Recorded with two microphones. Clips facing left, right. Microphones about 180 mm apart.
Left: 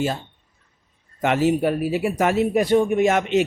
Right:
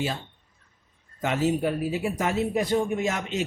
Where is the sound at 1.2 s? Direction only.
70° left (ahead or behind).